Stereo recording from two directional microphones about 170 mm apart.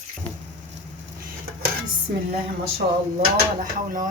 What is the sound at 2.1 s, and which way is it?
Speech, 65° right (ahead or behind).